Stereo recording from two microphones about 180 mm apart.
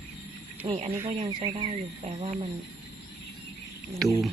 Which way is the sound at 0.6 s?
35° right (ahead or behind).